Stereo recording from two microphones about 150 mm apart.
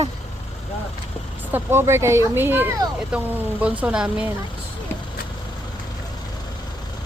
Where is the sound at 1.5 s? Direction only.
15° right (ahead or behind).